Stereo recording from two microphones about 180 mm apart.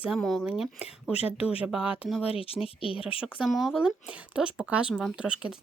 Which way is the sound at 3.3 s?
5° right (ahead or behind).